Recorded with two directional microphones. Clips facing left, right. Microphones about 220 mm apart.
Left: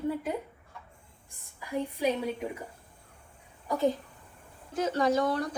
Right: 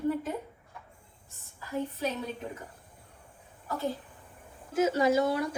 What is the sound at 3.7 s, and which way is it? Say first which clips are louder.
Speech: left 5 dB; 15° left (ahead or behind).